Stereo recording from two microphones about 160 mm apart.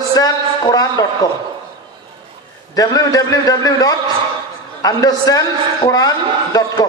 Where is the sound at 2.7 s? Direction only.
25° left (ahead or behind).